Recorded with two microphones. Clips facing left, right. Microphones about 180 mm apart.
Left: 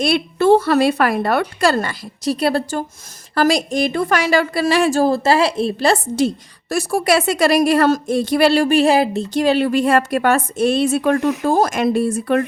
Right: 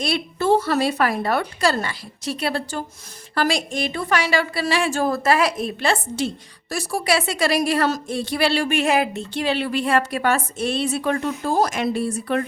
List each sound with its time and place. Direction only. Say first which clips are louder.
0.0 s a woman's voice: left 7 dB; 65° left (ahead or behind)
1.8 s a woman's voice: left 6 dB; 40° left (ahead or behind)